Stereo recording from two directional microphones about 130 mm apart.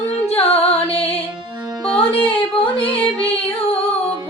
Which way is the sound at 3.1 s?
45° left (ahead or behind).